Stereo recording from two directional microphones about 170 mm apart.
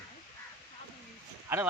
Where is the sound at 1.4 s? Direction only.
15° right (ahead or behind).